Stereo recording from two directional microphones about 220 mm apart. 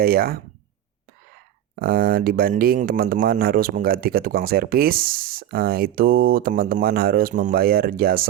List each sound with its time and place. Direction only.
0.0 s speech: 45° right (ahead or behind)
1.7 s speech: 40° right (ahead or behind)